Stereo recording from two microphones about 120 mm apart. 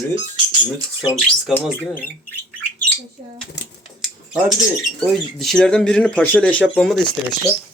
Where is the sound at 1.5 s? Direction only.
Centre (ahead or behind).